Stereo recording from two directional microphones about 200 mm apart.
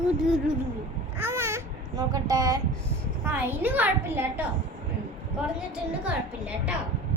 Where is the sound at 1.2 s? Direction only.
15° right (ahead or behind).